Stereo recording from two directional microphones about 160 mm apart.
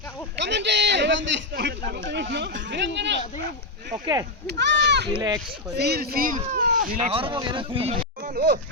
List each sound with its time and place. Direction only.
0.3 s a sound: 90° right
1.5 s speech: 90° right
4.0 s speech: 25° right (ahead or behind)
4.4 s speech: 90° right
5.1 s speech: 25° right (ahead or behind)
5.7 s speech: 90° right; by 7.0 s 55° right (ahead or behind)
7.0 s speech: 35° right (ahead or behind)